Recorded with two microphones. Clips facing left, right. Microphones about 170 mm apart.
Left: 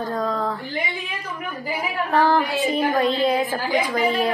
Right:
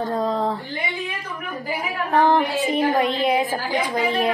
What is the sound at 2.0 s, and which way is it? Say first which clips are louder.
Speech: right 1 dB; 20° right (ahead or behind).